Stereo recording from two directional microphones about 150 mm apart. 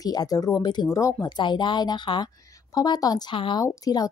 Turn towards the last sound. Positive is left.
turn(degrees=25)  # may be behind; listen again after turning